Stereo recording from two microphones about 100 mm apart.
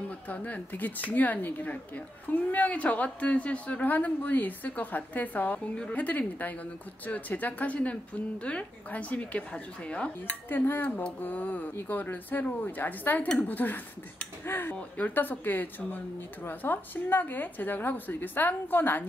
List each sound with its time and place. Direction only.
0.3 s a woman's voice: 15° left (ahead or behind)